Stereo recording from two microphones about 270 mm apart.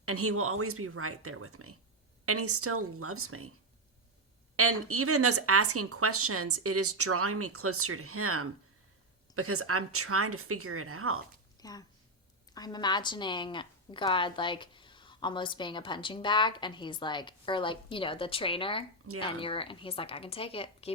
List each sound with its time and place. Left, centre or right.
0.0 s speech: right
4.5 s speech: right
11.6 s a woman's voice: centre